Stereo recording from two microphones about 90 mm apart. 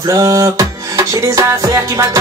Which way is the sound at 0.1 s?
35° right (ahead or behind).